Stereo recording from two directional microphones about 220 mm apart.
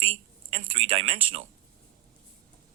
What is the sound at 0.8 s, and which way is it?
Speech, 25° right (ahead or behind).